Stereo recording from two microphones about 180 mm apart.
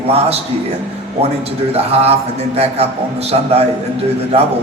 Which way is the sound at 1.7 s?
35° right (ahead or behind).